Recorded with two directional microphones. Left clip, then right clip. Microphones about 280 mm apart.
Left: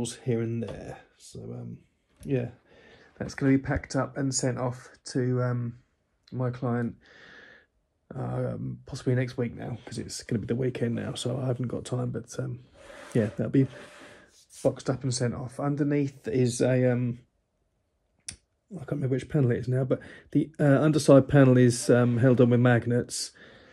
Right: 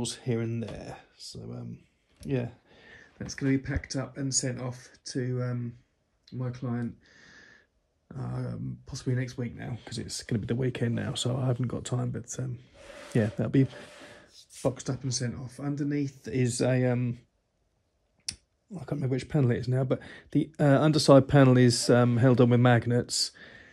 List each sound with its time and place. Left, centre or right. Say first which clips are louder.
0.0 s speech: left 2 dB; centre
6.7 s speech: left 5 dB; centre
8.1 s speech: left 6 dB; centre
9.0 s speech: left 6 dB; centre
9.6 s speech: left 2 dB; right
12.7 s a sound: left 1 dB; centre
14.9 s speech: left 5 dB; centre
16.2 s speech: left 4 dB; centre
18.2 s finger snapping: right 6 dB; centre
19.5 s speech: left 2 dB; centre
23.4 s a sound: right 2 dB; right